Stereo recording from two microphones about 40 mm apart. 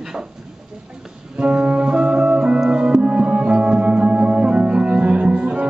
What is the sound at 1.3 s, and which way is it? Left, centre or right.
Music, right.